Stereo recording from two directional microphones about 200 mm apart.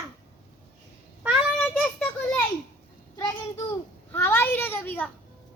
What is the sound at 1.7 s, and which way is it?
Children playing, 5° left (ahead or behind).